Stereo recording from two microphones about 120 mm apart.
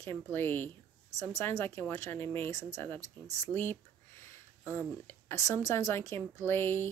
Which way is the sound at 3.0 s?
70° right (ahead or behind).